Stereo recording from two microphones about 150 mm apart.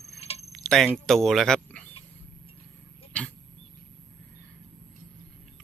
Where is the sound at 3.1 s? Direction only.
10° left (ahead or behind).